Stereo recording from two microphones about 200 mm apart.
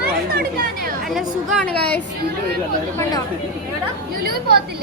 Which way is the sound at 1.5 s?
5° left (ahead or behind).